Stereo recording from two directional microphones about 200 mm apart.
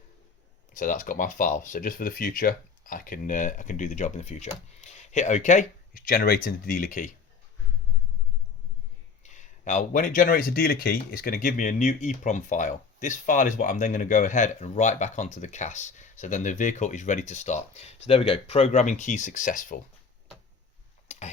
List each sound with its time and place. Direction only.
0.7 s speech: 40° left (ahead or behind)
9.2 s speech: 35° left (ahead or behind)
21.1 s tick-tock: 30° left (ahead or behind)